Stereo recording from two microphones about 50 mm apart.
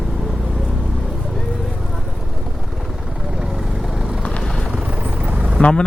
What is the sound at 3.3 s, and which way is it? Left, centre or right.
Vehicle, centre.